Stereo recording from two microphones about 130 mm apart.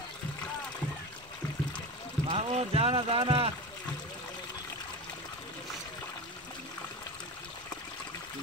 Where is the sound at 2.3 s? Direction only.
50° right (ahead or behind).